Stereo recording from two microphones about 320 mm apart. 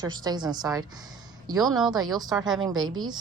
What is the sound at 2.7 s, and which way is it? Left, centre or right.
Speech, right.